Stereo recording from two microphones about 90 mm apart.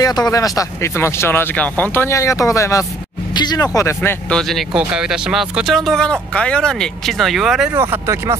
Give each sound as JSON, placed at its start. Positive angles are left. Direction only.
{"t": 0.0, "sound": "speech", "side_deg": 45}
{"t": 0.9, "sound": "speech", "side_deg": 30}
{"t": 2.0, "sound": "speech", "side_deg": 35}
{"t": 3.3, "sound": "speech", "side_deg": 50}
{"t": 3.8, "sound": "speech", "side_deg": 25}
{"t": 4.3, "sound": "speech", "side_deg": 5}
{"t": 4.7, "sound": "speech", "side_deg": -10}
{"t": 7.7, "sound": "speech", "side_deg": -30}